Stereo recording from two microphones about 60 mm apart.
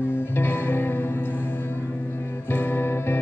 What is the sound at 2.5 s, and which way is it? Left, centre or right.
Music, left.